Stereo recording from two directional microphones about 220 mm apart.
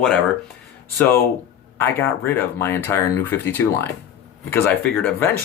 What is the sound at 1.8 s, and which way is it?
Speech, 10° left (ahead or behind).